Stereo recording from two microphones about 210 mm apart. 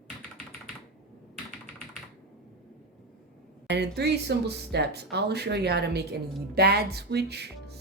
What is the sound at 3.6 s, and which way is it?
Speech, 55° right (ahead or behind).